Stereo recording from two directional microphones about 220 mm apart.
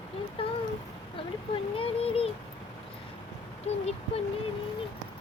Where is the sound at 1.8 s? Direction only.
25° left (ahead or behind).